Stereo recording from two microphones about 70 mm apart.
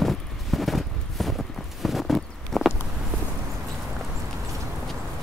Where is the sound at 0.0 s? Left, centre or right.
Centre.